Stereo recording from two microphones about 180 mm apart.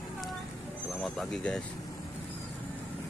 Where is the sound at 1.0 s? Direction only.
Centre (ahead or behind).